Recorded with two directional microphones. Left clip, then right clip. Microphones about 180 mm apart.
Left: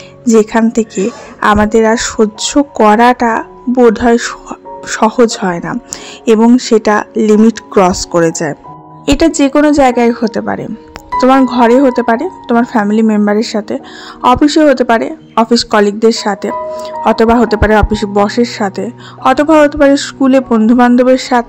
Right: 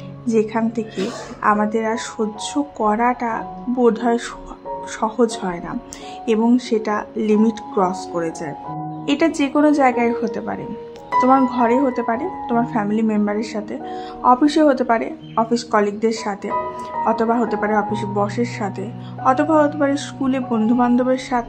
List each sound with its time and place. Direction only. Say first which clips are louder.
0.2 s a woman's voice: left 10 dB; 45° left (ahead or behind)